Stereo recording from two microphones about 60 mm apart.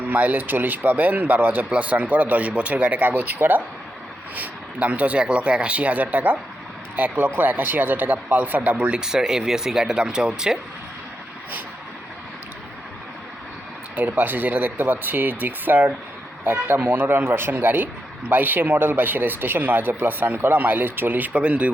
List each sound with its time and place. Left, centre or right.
0.1 s speech: right
1.7 s speech: right
3.0 s speech: right; by 10.6 s centre
13.9 s speech: right